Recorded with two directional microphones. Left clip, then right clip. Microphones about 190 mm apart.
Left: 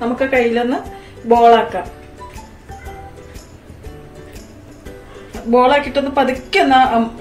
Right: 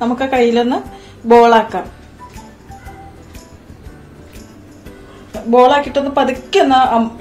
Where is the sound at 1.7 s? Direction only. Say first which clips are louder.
Right 1 dB; 50° right (ahead or behind).